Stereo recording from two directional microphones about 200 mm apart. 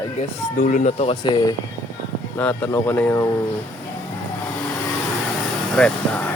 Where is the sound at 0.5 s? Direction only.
40° left (ahead or behind); by 1.6 s 25° left (ahead or behind).